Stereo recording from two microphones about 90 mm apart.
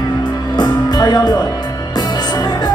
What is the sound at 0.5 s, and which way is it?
Music, 55° left (ahead or behind).